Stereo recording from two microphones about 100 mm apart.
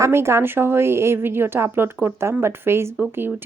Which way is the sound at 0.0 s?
25° right (ahead or behind).